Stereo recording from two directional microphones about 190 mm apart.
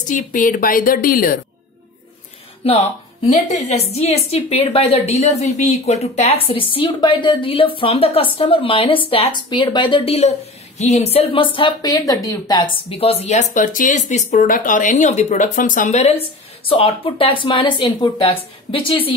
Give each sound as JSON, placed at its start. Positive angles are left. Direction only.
{"t": 0.1, "sound": "a woman's voice", "side_deg": 45}
{"t": 2.6, "sound": "a woman's voice", "side_deg": 30}